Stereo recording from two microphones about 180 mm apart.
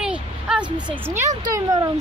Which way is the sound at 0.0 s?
5° right (ahead or behind).